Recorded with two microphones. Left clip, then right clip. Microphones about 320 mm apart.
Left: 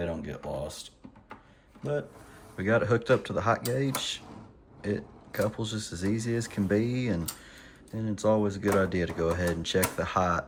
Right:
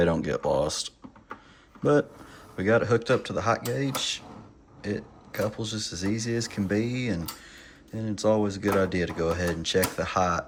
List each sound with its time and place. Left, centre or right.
0.0 s speech: centre
2.6 s speech: centre